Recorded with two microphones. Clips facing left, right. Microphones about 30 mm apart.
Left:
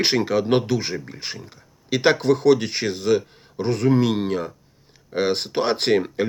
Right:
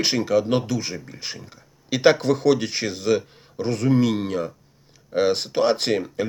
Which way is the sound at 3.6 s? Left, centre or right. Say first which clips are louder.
Left 1 dB; centre.